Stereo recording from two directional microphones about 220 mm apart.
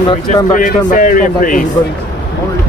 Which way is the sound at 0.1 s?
35° left (ahead or behind).